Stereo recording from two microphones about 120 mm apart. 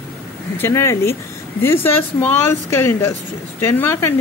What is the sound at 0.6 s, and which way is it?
A woman's voice, 20° left (ahead or behind).